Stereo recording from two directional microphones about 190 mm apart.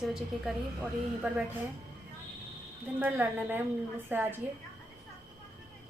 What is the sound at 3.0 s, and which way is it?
A woman's voice, 10° right (ahead or behind).